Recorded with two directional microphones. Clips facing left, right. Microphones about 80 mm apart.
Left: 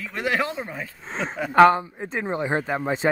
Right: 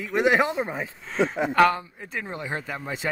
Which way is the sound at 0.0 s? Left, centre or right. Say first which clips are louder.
Right 4 dB; right.